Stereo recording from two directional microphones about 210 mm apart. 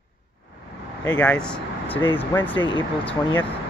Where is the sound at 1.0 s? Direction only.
5° left (ahead or behind).